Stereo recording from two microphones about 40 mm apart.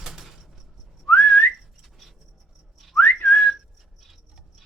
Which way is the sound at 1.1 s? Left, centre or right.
Left.